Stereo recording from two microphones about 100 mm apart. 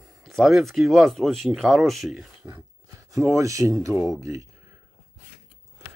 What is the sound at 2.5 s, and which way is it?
Speech, 30° right (ahead or behind).